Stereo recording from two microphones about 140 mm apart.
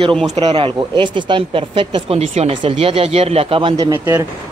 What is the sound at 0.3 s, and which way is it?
Speech, 45° right (ahead or behind).